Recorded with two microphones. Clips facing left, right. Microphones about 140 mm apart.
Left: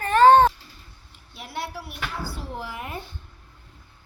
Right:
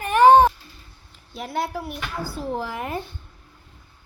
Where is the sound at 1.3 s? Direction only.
40° right (ahead or behind).